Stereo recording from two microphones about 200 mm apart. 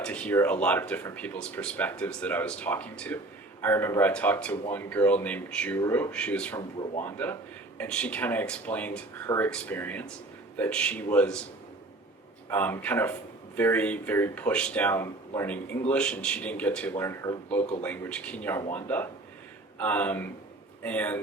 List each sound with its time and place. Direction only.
0.0 s speech: 5° left (ahead or behind)
12.5 s speech: 10° left (ahead or behind)
17.6 s speech: 35° left (ahead or behind)
17.8 s speech: 10° left (ahead or behind)